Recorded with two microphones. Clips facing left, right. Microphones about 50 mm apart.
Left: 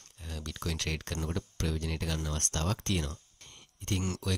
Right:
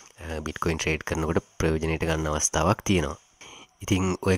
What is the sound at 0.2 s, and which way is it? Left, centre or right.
Speech, right.